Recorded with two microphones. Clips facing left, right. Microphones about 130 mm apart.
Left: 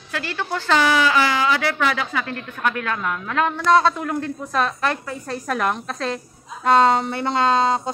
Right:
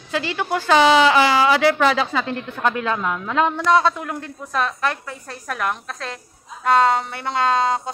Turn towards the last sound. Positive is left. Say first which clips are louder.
# left 1 dB
turn(degrees=-5)  # may be behind; listen again after turning